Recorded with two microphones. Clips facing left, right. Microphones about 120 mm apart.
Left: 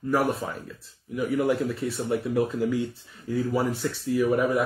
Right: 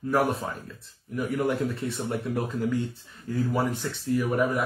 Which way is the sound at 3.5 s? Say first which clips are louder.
Left 2 dB; centre (ahead or behind).